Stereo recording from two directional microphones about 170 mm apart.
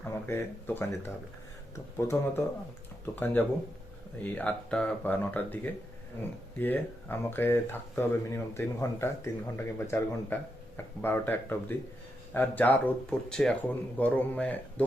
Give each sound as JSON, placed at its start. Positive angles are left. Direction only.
{"t": 0.0, "sound": "speech", "side_deg": 15}